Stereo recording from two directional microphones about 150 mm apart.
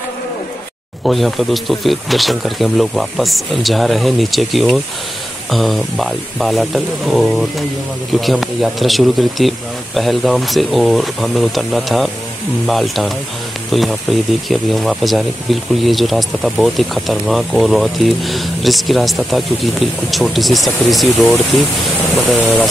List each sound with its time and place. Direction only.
1.0 s speech: centre (ahead or behind)